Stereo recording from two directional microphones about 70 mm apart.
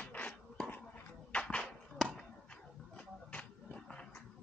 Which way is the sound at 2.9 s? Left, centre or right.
Centre.